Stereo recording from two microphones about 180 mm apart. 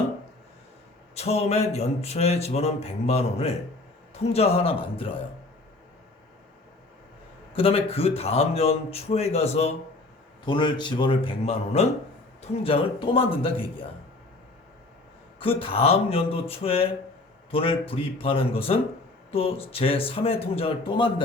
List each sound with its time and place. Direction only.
1.1 s a man's voice: 35° left (ahead or behind)
7.5 s a man's voice: 30° left (ahead or behind)
15.4 s a man's voice: 30° left (ahead or behind)